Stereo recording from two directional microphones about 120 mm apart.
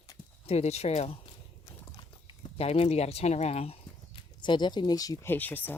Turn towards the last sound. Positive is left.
turn(degrees=15)  # may be behind; listen again after turning